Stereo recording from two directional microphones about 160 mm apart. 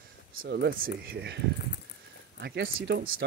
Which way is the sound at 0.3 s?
80° right.